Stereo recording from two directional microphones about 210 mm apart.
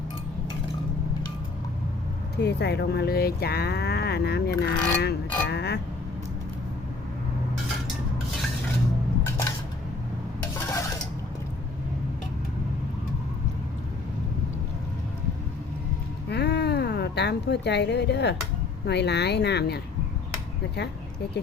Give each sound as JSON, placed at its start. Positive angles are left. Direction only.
{"t": 2.4, "sound": "speech", "side_deg": 50}
{"t": 10.7, "sound": "dishes", "side_deg": 15}
{"t": 16.3, "sound": "a sound", "side_deg": 50}
{"t": 18.9, "sound": "speech", "side_deg": 55}